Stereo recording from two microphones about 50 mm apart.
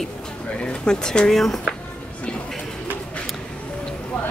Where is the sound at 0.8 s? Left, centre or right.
Centre.